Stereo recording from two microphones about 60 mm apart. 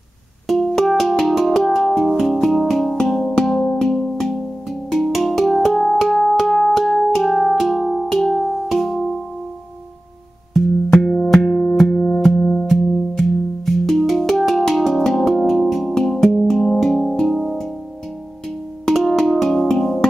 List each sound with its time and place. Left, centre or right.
0.5 s music: centre
10.5 s music: centre
11.9 s music: centre
12.6 s music: centre
18.9 s music: centre